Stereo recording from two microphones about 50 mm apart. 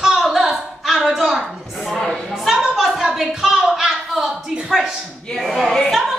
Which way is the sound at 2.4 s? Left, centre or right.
Centre.